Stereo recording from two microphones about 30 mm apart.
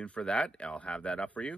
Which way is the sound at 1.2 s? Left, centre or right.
Left.